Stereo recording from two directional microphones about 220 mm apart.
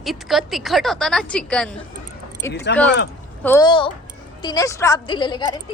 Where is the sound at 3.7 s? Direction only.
25° left (ahead or behind).